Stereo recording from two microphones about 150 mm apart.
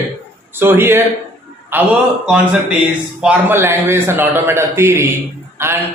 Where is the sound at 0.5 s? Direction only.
15° right (ahead or behind).